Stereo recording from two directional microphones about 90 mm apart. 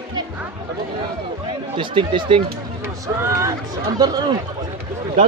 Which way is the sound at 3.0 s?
35° right (ahead or behind).